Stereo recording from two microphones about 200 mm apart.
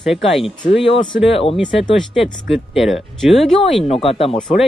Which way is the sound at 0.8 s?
25° left (ahead or behind).